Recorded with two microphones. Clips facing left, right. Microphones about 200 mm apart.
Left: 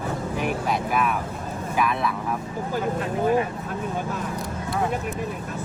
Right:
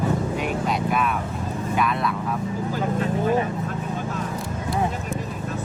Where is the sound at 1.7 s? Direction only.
5° left (ahead or behind).